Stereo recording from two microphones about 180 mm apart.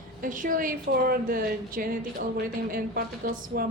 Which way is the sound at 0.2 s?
50° right (ahead or behind).